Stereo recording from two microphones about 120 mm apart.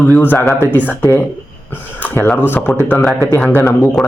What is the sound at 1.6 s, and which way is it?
Speech, 15° left (ahead or behind).